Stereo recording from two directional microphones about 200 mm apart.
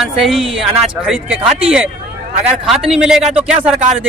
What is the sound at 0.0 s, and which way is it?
A man's voice, centre (ahead or behind).